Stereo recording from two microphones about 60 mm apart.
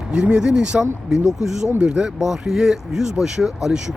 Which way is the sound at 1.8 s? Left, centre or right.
Centre.